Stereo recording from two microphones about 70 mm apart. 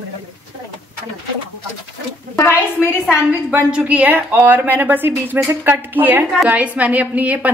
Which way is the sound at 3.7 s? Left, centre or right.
Right.